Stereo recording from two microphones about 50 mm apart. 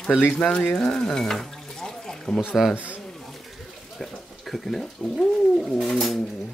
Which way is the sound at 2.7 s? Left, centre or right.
Right.